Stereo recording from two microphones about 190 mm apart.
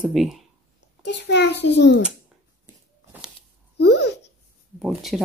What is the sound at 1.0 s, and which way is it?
Speech, 65° left (ahead or behind).